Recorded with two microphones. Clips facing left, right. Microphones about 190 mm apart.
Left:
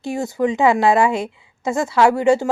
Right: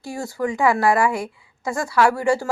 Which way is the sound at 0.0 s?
20° left (ahead or behind).